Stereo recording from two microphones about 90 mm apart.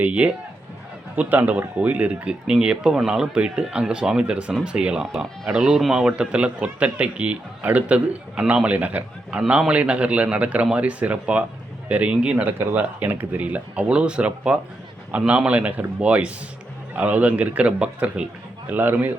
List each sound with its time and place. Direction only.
0.0 s a man's voice: 15° right (ahead or behind)